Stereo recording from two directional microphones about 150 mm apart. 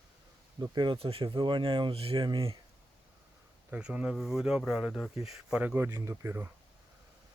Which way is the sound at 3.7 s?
5° right (ahead or behind).